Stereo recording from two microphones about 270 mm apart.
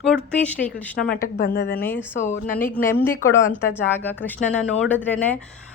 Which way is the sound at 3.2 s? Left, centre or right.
Centre.